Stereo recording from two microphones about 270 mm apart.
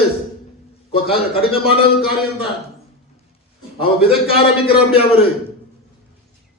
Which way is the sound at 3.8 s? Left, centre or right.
Centre.